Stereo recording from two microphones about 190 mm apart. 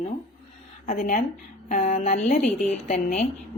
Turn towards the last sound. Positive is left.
turn(degrees=35)  # may be behind; listen again after turning